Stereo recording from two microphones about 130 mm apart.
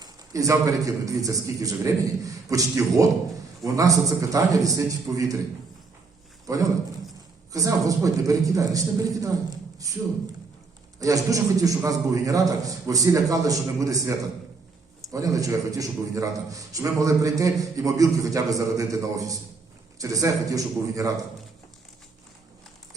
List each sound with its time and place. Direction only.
0.0 s a man's voice: 25° right (ahead or behind)
6.5 s a man's voice: 25° right (ahead or behind)
11.0 s a man's voice: 25° right (ahead or behind)
15.1 s a man's voice: 25° right (ahead or behind)